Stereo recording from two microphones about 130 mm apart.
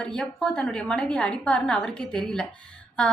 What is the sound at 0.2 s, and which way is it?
A woman's voice, 5° left (ahead or behind).